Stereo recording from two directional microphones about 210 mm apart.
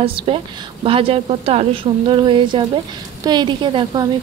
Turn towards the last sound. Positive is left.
turn(degrees=-20)  # may be behind; listen again after turning